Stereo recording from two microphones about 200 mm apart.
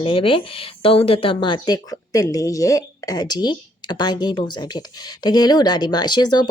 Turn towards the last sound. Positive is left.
turn(degrees=20)  # may be behind; listen again after turning